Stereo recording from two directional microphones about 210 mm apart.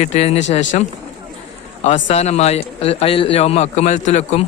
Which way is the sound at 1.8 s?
35° left (ahead or behind).